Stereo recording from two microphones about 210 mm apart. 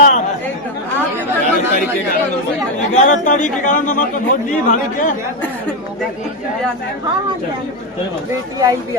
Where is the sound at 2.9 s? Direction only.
35° left (ahead or behind).